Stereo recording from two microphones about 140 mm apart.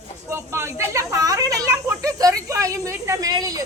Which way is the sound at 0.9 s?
20° right (ahead or behind).